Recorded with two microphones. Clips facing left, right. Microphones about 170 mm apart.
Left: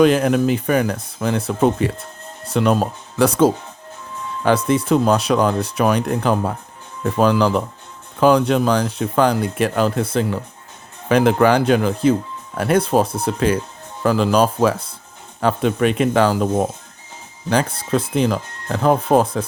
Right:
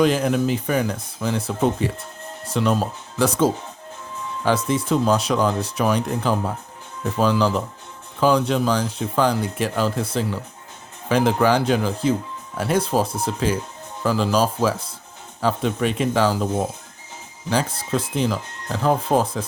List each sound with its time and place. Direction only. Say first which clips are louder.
0.0 s speech: left 4 dB; 65° left (ahead or behind)